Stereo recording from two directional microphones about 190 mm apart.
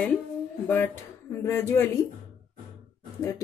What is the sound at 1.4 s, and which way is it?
Speech, 15° left (ahead or behind).